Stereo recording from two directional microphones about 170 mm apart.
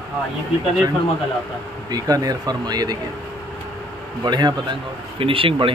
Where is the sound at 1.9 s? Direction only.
20° right (ahead or behind).